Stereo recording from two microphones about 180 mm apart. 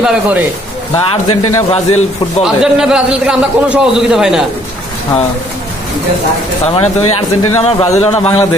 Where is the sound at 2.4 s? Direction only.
5° right (ahead or behind).